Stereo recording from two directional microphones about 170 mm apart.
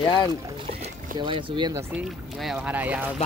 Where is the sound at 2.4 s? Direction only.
5° right (ahead or behind).